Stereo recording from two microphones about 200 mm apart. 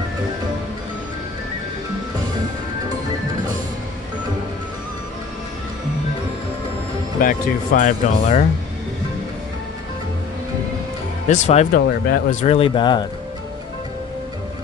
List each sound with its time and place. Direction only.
7.2 s speech: 45° left (ahead or behind)
11.2 s speech: 35° left (ahead or behind)